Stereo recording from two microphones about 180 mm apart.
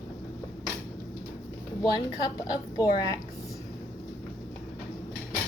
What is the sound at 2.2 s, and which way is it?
Speech, 20° left (ahead or behind).